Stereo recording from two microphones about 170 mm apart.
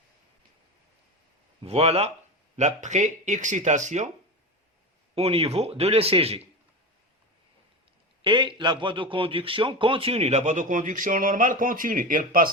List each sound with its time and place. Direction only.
1.6 s a man's voice: 35° right (ahead or behind)
5.1 s a man's voice: 35° right (ahead or behind)
8.2 s a man's voice: 30° right (ahead or behind); by 12.5 s 55° right (ahead or behind)